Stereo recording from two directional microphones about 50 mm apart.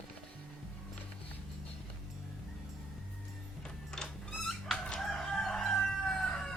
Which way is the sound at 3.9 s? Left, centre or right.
Centre.